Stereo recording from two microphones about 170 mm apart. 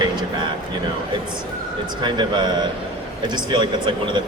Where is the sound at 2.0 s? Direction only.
25° right (ahead or behind).